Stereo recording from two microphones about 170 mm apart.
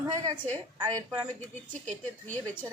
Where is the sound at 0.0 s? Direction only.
25° right (ahead or behind).